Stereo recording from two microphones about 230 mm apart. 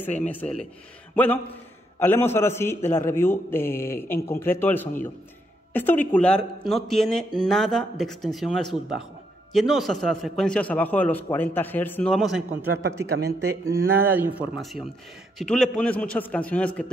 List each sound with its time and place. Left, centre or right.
0.3 s a man's voice: centre
12.6 s speech: right
13.2 s speech: right
14.1 s a man's voice: centre